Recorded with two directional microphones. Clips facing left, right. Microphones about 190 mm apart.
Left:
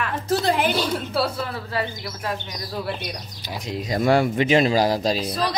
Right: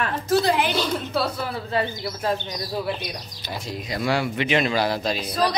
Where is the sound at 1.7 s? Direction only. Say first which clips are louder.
Right 2 dB; 30° right (ahead or behind).